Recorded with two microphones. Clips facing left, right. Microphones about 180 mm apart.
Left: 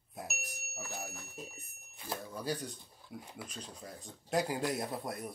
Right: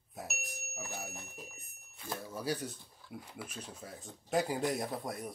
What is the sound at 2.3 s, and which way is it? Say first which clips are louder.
Speech: right 2 dB; 5° right (ahead or behind).